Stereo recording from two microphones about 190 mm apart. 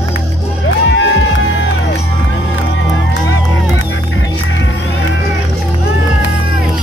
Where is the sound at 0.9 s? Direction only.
75° left (ahead or behind).